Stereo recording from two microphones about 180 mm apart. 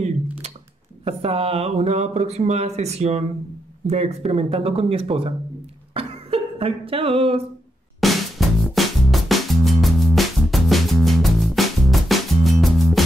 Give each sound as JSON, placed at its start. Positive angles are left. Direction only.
{"t": 1.0, "sound": "speech", "side_deg": -30}
{"t": 5.9, "sound": "music", "side_deg": -30}
{"t": 8.0, "sound": "music", "side_deg": 0}